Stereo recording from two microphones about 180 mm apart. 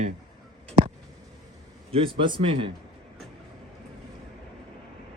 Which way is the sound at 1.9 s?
30° right (ahead or behind).